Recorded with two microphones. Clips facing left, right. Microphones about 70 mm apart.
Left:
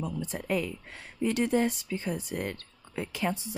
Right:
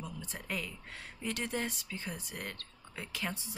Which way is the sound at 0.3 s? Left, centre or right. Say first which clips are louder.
Left 9 dB; left.